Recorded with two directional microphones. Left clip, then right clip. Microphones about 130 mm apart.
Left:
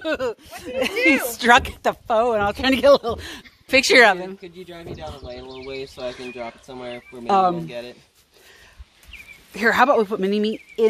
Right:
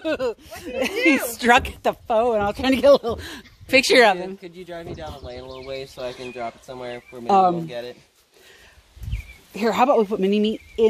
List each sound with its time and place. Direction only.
0.0 s a woman's voice: 10° right (ahead or behind)
0.9 s speech: 30° left (ahead or behind)
1.3 s a woman's voice: 20° right (ahead or behind)
3.0 s speech: 25° right (ahead or behind)
3.8 s a woman's voice: 10° right (ahead or behind)
4.9 s speech: 25° right (ahead or behind)
9.6 s a woman's voice: 15° right (ahead or behind)